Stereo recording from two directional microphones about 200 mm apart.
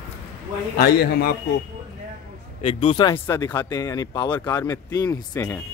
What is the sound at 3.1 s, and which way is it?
Speech, 10° left (ahead or behind).